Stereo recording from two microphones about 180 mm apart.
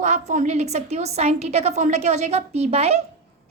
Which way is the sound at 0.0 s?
40° right (ahead or behind).